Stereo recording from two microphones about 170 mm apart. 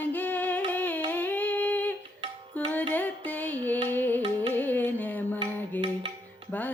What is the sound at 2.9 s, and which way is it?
Carnatic music, 10° left (ahead or behind).